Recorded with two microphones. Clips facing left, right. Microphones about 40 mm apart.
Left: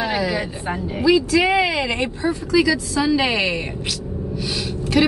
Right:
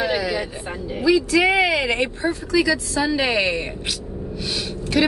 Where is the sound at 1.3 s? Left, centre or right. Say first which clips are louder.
Even; centre.